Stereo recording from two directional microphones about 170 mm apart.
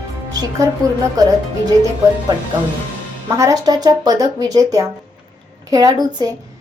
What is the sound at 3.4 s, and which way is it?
Speech, 20° right (ahead or behind).